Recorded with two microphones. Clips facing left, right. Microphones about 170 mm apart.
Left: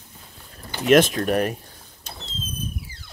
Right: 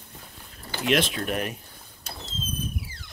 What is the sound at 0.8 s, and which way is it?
Speech, 45° left (ahead or behind).